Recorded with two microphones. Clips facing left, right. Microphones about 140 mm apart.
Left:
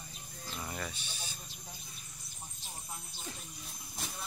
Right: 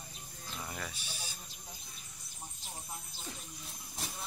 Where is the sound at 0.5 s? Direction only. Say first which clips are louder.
Left 2 dB; centre (ahead or behind).